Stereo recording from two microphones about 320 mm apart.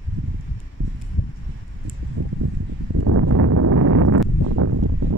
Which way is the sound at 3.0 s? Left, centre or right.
Right.